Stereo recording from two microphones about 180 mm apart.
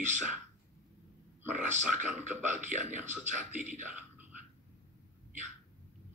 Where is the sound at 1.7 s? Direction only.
40° right (ahead or behind).